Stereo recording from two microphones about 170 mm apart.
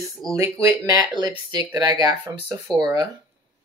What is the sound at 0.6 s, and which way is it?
Speech, 20° right (ahead or behind).